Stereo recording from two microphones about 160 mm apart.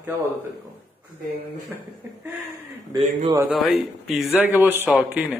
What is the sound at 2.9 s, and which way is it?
Speech, 25° right (ahead or behind).